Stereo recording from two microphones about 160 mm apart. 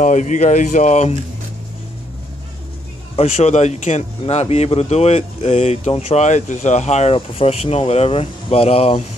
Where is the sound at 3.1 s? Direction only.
40° left (ahead or behind).